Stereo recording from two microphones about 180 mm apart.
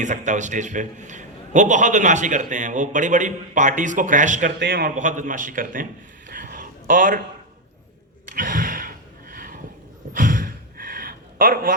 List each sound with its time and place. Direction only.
0.0 s a man's voice: 40° right (ahead or behind)
4.6 s a man's voice: 70° right (ahead or behind)
4.9 s a man's voice: 45° right (ahead or behind)
8.3 s a sound: 50° right (ahead or behind)